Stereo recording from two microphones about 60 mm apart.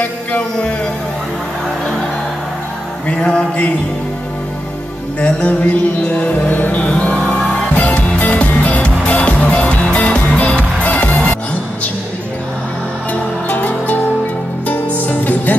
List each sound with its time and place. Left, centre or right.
0.0 s music: left
3.1 s music: centre
5.2 s music: left
13.1 s music: left